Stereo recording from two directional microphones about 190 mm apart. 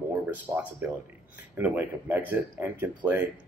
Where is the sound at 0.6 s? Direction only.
10° right (ahead or behind).